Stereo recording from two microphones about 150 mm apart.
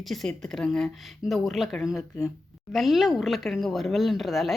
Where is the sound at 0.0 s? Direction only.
Centre (ahead or behind).